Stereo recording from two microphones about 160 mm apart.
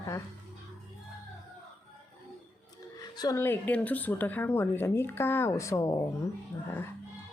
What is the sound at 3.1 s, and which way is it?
A woman's voice, 20° left (ahead or behind).